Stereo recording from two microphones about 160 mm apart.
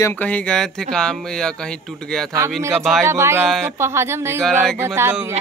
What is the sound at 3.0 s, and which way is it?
A man's voice, 15° right (ahead or behind).